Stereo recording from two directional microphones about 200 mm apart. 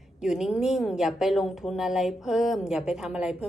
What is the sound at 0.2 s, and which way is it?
A woman's voice, centre (ahead or behind).